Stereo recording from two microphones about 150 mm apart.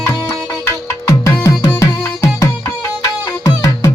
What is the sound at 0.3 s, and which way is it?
Music, 15° left (ahead or behind).